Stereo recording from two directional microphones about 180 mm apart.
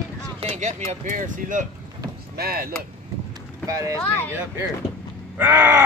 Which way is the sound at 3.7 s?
20° right (ahead or behind).